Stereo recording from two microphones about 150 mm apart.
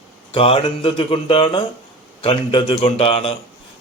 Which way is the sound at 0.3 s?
40° left (ahead or behind).